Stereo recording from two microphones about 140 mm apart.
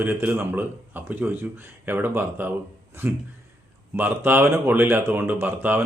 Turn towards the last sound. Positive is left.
turn(degrees=-15)  # may be behind; listen again after turning